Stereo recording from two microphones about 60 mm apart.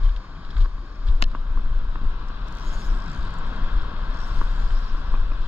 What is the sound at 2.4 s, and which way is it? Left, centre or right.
Vehicle, right.